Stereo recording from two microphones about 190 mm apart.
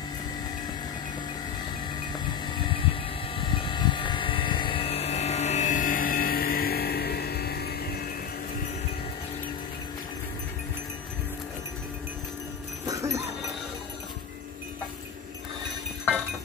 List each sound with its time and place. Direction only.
2.1 s a sound: 25° left (ahead or behind)
3.3 s vehicle: 25° left (ahead or behind); by 8.0 s 55° left (ahead or behind)
12.8 s sheep: 15° right (ahead or behind)